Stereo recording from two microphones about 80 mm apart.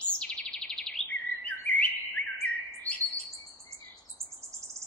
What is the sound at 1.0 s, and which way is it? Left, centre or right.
Bird, centre.